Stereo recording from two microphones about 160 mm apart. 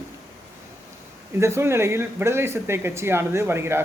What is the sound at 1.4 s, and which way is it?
Speech, 15° right (ahead or behind).